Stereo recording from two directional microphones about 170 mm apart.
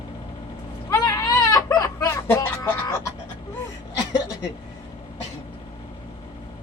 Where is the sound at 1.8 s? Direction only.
20° left (ahead or behind).